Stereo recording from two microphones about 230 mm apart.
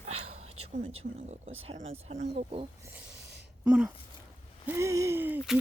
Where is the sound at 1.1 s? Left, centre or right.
Right.